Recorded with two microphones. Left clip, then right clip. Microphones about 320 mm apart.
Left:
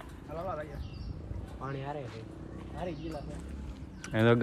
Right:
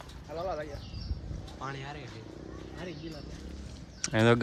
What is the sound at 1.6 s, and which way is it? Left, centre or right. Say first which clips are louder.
Speech: left 1 dB; centre.